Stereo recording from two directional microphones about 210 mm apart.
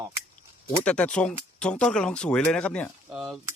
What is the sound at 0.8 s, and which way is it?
Speech, 5° left (ahead or behind).